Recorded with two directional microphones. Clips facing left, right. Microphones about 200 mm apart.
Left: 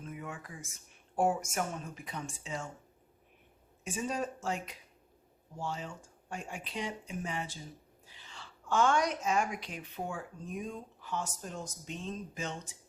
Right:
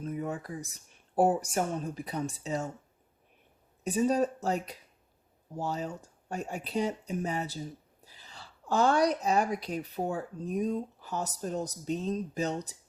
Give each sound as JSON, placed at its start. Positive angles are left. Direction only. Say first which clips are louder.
{"t": 0.0, "sound": "speech", "louder": "right 9 dB", "side_deg": -40}
{"t": 3.8, "sound": "speech", "louder": "right 9 dB", "side_deg": -40}